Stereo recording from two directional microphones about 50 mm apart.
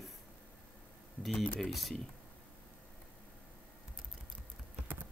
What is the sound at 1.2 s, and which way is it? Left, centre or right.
Speech, centre.